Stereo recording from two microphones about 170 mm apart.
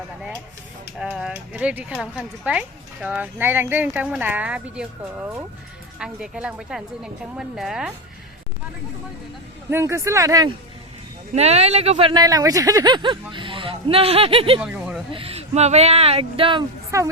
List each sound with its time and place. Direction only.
0.9 s a woman's voice: 5° right (ahead or behind)
9.6 s speech: 15° right (ahead or behind)
11.3 s speech: 40° right (ahead or behind)
14.6 s a sound: 5° right (ahead or behind)
15.1 s speech: 35° right (ahead or behind)
16.9 s speech: 20° right (ahead or behind)